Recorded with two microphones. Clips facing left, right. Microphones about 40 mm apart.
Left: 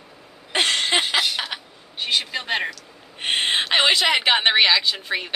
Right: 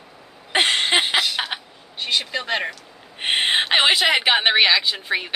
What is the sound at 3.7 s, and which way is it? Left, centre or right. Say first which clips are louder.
A woman's voice: even; centre.